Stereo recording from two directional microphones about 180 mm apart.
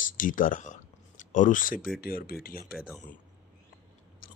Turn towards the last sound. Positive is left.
turn(degrees=-5)  # may be behind; listen again after turning